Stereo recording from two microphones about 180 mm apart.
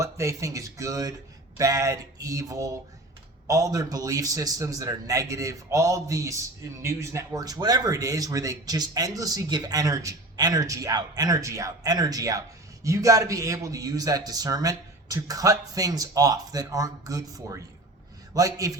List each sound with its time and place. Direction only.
0.0 s a man's voice: 15° right (ahead or behind)